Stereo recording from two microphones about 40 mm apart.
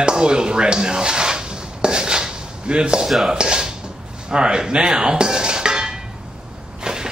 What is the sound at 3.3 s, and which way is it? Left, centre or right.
Tap, centre.